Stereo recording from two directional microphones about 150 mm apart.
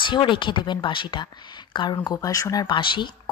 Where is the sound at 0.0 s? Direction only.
30° left (ahead or behind).